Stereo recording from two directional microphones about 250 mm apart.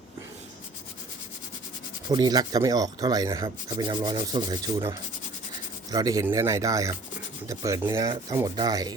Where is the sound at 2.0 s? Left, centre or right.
Centre.